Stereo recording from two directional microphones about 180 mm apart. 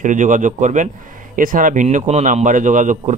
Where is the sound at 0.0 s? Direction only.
45° right (ahead or behind).